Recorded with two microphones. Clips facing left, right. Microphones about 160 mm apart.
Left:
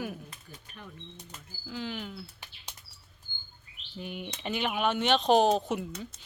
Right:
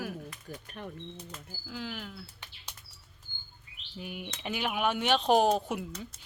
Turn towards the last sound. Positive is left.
turn(degrees=-10)  # may be behind; listen again after turning